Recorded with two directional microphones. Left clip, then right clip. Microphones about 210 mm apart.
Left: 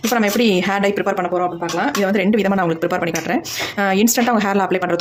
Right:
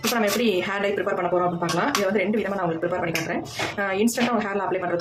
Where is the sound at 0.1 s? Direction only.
45° left (ahead or behind).